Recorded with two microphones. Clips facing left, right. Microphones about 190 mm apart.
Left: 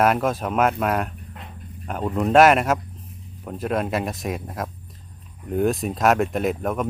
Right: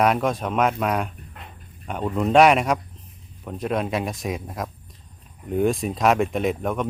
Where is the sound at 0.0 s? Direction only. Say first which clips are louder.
Left 1 dB; centre (ahead or behind).